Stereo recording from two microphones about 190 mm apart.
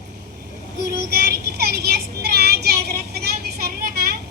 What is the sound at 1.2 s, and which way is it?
Child singing, 55° right (ahead or behind).